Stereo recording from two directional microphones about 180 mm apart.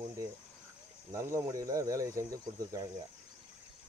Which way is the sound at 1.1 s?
15° right (ahead or behind).